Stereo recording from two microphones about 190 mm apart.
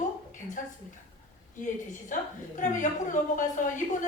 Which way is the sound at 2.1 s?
45° left (ahead or behind).